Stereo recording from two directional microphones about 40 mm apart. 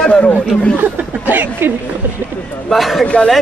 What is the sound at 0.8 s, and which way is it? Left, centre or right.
Speech, right.